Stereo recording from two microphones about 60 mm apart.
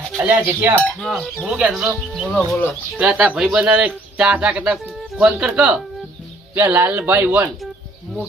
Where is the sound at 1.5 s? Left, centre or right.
Centre.